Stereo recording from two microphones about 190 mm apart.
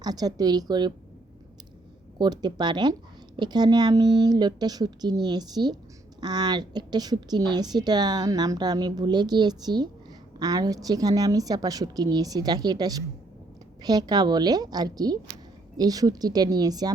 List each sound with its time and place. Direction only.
0.0 s speech: 20° right (ahead or behind)
2.1 s speech: 20° right (ahead or behind)